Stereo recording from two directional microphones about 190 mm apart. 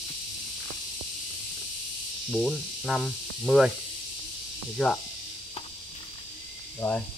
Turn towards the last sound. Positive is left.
turn(degrees=10)  # may be behind; listen again after turning